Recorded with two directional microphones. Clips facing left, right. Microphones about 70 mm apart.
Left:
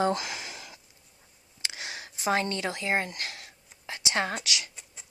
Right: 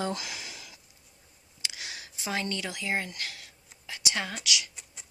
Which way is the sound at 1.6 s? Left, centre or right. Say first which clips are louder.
Left 3 dB; left.